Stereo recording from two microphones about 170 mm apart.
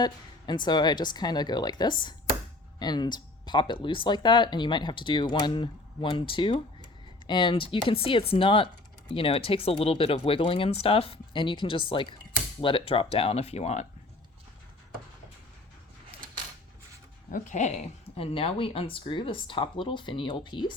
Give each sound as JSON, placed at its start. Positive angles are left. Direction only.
{"t": 0.0, "sound": "speech", "side_deg": 25}
{"t": 17.3, "sound": "speech", "side_deg": 45}
{"t": 18.2, "sound": "speech", "side_deg": 35}